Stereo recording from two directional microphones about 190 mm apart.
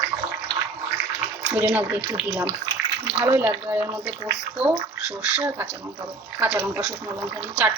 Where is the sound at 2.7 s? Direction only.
20° right (ahead or behind).